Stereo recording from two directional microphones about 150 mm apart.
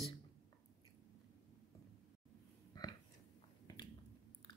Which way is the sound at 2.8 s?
25° left (ahead or behind).